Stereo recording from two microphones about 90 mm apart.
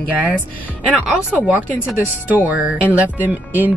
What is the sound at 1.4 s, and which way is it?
Speech, 15° right (ahead or behind).